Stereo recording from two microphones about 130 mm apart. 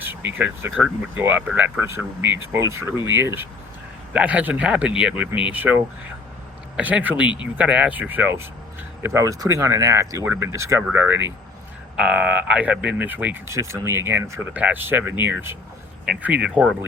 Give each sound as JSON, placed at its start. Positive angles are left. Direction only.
{"t": 0.0, "sound": "speech", "side_deg": -15}